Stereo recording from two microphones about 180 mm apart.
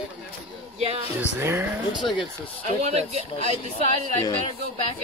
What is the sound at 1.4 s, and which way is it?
Speech, 10° right (ahead or behind).